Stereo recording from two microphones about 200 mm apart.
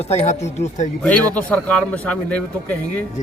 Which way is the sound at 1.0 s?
5° left (ahead or behind).